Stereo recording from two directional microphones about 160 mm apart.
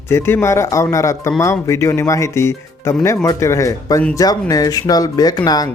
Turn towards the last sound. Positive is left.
turn(degrees=25)  # may be behind; listen again after turning